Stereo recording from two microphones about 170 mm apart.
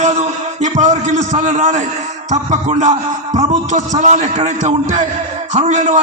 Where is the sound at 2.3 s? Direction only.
45° right (ahead or behind).